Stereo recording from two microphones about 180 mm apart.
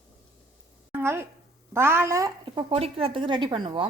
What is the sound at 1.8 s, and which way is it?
Speech, 15° right (ahead or behind).